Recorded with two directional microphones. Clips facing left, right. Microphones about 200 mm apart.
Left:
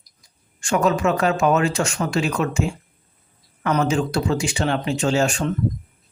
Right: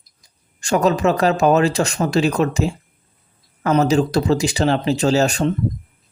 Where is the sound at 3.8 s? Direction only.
40° right (ahead or behind).